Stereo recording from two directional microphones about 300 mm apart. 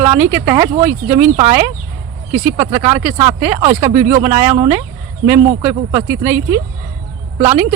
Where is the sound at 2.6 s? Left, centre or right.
Right.